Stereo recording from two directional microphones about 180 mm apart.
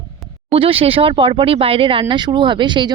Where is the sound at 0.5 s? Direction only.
30° right (ahead or behind).